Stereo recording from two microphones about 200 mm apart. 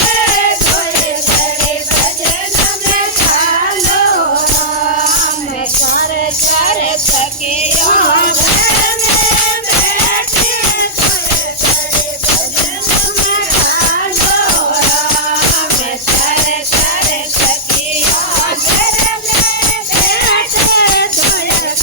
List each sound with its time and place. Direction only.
20.1 s music: 50° left (ahead or behind)